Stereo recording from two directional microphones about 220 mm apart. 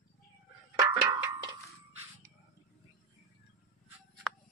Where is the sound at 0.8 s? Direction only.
15° right (ahead or behind).